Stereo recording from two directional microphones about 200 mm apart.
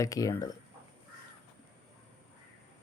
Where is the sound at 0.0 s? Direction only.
15° left (ahead or behind).